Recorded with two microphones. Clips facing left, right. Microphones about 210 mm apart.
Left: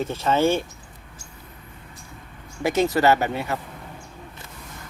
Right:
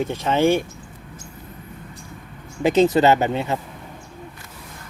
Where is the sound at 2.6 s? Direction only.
20° right (ahead or behind).